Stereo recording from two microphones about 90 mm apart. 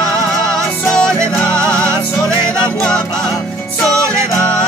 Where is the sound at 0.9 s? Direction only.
10° left (ahead or behind).